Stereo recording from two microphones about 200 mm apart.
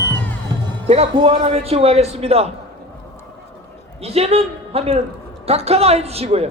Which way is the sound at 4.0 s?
30° right (ahead or behind).